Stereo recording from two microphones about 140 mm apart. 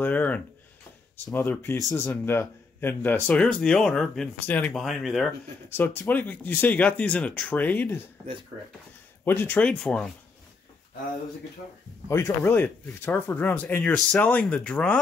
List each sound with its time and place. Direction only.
0.0 s a sound: 10° left (ahead or behind)
1.3 s speech: 15° left (ahead or behind)
4.8 s speech: centre (ahead or behind)
5.7 s speech: 15° left (ahead or behind)
9.2 s speech: 15° left (ahead or behind)
12.1 s speech: 15° left (ahead or behind)